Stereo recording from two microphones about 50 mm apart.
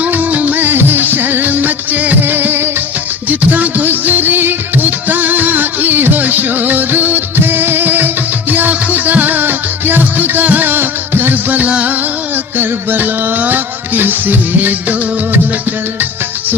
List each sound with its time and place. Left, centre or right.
0.0 s music: right
12.5 s music: right